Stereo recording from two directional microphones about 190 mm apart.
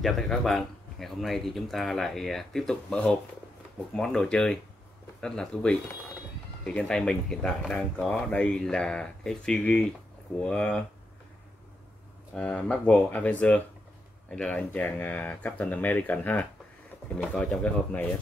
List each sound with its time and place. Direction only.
0.0 s speech: centre (ahead or behind)
12.4 s speech: 5° left (ahead or behind)